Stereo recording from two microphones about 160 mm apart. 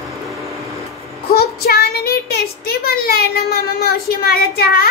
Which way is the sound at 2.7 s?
70° left (ahead or behind).